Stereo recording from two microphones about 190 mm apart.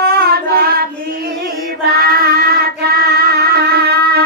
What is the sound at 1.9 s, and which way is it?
Child singing, 55° right (ahead or behind).